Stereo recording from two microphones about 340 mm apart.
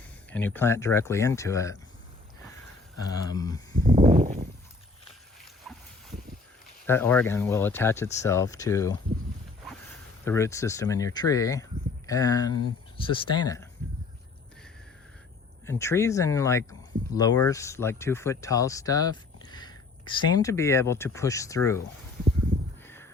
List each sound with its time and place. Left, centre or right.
0.3 s speech: centre
3.1 s speech: centre
3.8 s a sound: centre
5.7 s dog: centre
6.8 s speech: centre
10.2 s speech: centre
15.6 s speech: centre